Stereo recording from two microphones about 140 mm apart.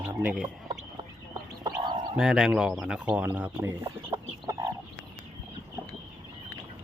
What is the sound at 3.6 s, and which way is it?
Chicken, 20° right (ahead or behind).